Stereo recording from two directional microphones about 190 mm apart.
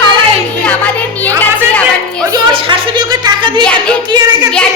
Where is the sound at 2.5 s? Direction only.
25° right (ahead or behind).